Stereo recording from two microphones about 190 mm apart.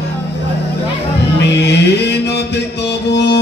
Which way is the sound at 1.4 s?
65° left (ahead or behind).